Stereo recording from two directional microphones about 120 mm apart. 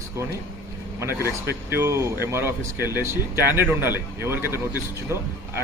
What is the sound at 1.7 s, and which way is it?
A man's voice, 20° right (ahead or behind).